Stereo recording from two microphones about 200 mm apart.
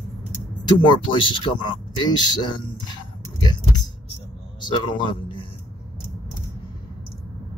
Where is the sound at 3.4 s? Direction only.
20° left (ahead or behind).